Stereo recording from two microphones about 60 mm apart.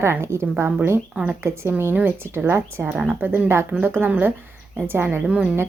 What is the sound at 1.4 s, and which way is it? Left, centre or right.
Speech, right.